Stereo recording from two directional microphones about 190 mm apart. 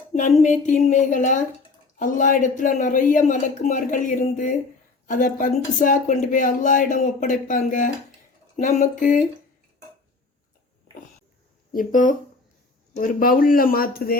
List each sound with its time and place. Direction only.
0.4 s a sound: 40° left (ahead or behind)
2.0 s speech: 45° left (ahead or behind)
11.7 s speech: 45° left (ahead or behind)